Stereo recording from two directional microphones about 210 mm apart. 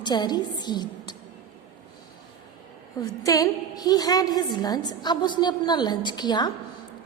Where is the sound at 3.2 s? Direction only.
15° left (ahead or behind).